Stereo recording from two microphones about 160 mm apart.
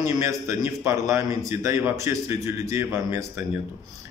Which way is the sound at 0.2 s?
20° right (ahead or behind).